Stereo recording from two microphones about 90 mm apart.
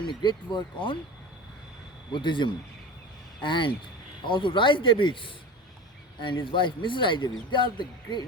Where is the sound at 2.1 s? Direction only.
60° left (ahead or behind).